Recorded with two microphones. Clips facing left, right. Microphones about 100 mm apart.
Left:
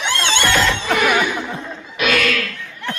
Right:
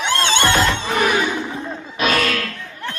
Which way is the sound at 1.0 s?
30° right (ahead or behind).